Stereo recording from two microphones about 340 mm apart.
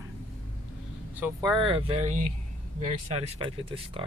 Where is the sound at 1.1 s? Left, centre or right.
Centre.